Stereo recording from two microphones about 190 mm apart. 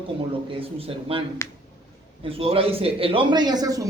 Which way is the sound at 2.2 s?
30° right (ahead or behind).